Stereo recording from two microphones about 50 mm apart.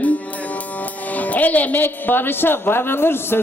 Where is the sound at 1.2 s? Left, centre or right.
Left.